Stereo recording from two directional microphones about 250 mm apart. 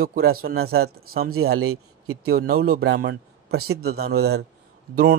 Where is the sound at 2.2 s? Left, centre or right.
Right.